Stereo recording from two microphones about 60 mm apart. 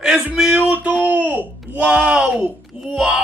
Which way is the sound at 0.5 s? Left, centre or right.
Right.